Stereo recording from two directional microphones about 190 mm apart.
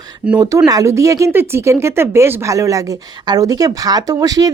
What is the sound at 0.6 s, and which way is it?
A woman's voice, 15° right (ahead or behind).